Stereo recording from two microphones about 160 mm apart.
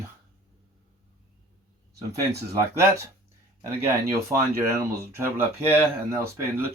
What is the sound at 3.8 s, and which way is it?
Speech, 15° right (ahead or behind).